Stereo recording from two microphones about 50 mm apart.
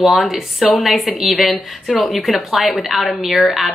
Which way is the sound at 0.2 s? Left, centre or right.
Centre.